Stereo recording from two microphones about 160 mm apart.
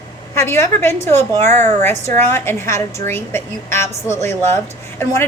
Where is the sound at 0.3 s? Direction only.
15° left (ahead or behind).